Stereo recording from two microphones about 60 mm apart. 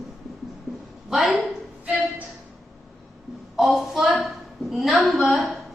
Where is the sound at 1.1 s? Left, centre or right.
Centre.